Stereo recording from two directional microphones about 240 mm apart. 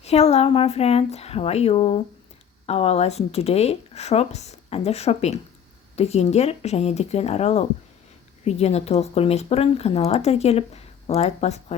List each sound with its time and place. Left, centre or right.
0.0 s speech: left